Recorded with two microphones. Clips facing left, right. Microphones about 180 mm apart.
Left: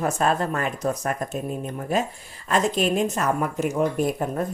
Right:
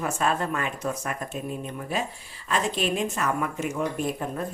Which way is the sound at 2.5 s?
45° left (ahead or behind).